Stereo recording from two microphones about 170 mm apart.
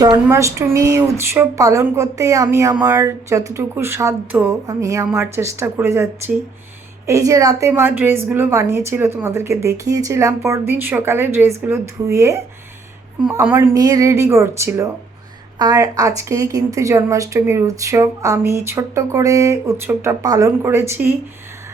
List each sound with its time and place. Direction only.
0.0 s a woman's voice: 20° right (ahead or behind)